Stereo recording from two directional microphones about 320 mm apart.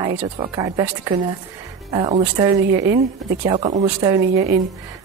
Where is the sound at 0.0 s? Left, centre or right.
Centre.